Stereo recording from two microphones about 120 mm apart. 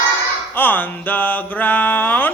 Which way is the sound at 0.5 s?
15° left (ahead or behind).